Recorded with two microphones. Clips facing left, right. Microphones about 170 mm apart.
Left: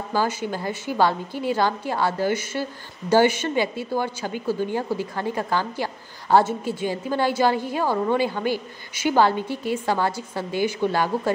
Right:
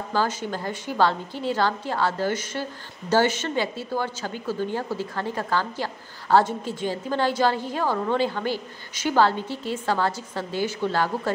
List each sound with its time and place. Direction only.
0.1 s a woman's voice: 10° left (ahead or behind)